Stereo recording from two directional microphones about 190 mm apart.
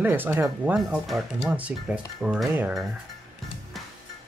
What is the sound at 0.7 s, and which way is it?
Speech, centre (ahead or behind).